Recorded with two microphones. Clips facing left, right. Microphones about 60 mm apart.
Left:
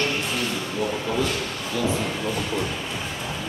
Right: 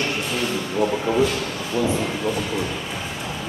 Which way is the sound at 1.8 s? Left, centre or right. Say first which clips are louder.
Right 3 dB; centre.